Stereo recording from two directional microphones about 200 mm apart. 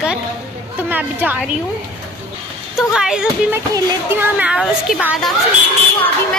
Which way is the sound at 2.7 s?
5° right (ahead or behind).